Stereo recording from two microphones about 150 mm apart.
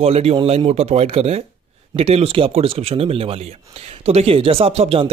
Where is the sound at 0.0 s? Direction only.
40° right (ahead or behind).